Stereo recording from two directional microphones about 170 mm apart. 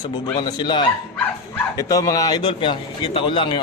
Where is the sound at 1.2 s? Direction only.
15° left (ahead or behind).